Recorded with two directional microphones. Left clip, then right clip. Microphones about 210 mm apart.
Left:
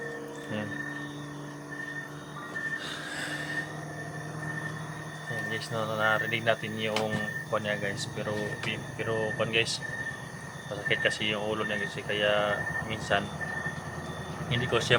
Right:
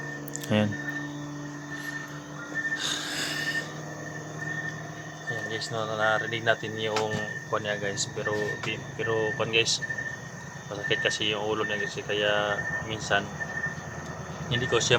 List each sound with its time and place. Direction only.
0.5 s speech: 60° right (ahead or behind)
2.7 s a sound: 50° right (ahead or behind)
5.7 s speech: 5° right (ahead or behind)
10.8 s speech: 15° right (ahead or behind)
14.5 s speech: 15° right (ahead or behind)